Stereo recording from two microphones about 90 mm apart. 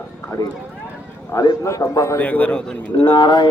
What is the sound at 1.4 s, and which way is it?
Speech, 35° left (ahead or behind).